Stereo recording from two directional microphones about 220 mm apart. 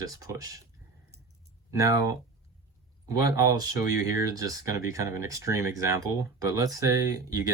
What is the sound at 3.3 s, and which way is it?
Speech, 15° right (ahead or behind).